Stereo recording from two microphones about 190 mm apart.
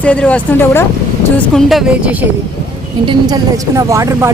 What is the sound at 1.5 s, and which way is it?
Speech, 5° right (ahead or behind).